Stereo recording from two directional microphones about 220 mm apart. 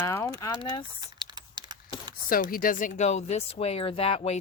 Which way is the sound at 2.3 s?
40° left (ahead or behind).